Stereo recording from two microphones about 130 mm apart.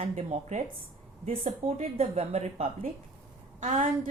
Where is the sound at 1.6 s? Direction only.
50° right (ahead or behind).